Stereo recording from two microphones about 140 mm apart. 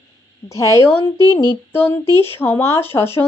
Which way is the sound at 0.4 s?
20° left (ahead or behind).